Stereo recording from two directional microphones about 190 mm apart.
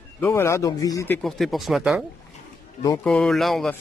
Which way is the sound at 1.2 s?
Centre (ahead or behind).